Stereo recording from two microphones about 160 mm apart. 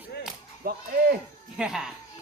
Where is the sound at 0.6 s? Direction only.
70° right (ahead or behind).